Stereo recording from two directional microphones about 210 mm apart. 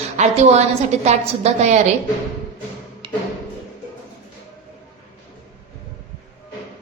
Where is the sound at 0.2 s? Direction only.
35° right (ahead or behind).